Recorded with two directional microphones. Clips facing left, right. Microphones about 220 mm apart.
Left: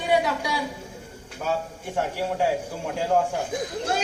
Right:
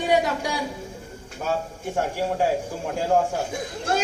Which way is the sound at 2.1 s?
45° right (ahead or behind).